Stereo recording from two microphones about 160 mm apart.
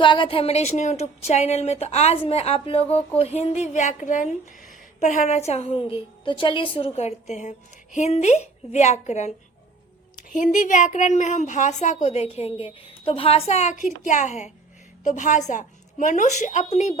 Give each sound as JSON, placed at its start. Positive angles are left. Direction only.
{"t": 0.0, "sound": "a woman's voice", "side_deg": 30}
{"t": 4.7, "sound": "a sound", "side_deg": 45}
{"t": 5.5, "sound": "a woman's voice", "side_deg": 40}